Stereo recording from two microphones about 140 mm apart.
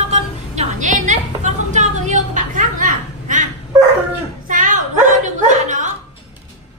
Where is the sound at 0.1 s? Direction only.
60° right (ahead or behind).